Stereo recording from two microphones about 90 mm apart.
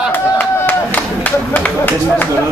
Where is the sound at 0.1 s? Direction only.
20° left (ahead or behind).